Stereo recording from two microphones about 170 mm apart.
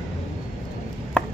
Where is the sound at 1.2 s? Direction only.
5° left (ahead or behind).